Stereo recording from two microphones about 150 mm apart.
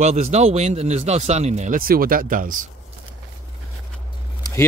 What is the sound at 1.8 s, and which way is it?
Speech, 75° right (ahead or behind).